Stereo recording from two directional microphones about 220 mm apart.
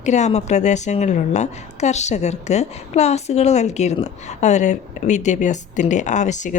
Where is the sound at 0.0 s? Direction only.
30° left (ahead or behind).